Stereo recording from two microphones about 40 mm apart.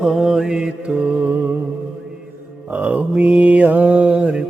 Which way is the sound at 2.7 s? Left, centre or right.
Right.